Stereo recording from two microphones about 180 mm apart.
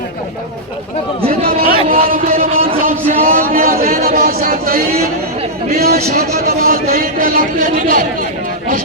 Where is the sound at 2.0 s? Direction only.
50° right (ahead or behind).